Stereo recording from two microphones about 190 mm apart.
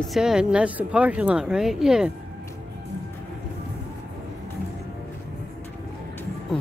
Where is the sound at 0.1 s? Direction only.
5° right (ahead or behind).